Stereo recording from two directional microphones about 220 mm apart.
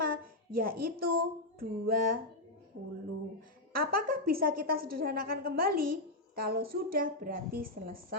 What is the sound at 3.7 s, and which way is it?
A woman's voice, 40° right (ahead or behind).